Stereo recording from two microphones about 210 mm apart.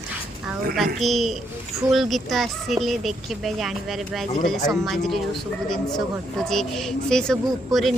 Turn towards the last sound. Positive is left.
turn(degrees=0)  # may be behind; listen again after turning